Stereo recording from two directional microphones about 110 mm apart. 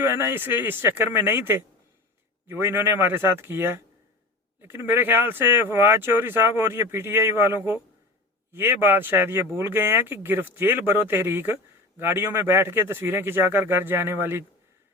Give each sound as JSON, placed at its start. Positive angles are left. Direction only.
{"t": 0.0, "sound": "speech", "side_deg": -25}